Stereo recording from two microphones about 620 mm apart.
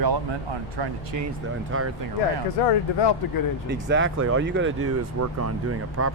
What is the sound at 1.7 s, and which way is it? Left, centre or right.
Speech, centre.